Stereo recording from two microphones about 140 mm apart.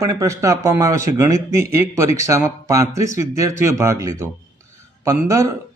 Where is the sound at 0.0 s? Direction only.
25° right (ahead or behind).